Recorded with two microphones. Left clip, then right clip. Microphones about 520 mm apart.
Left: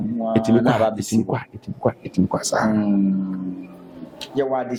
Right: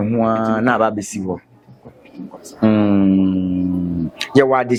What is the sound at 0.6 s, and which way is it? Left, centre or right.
Speech, right.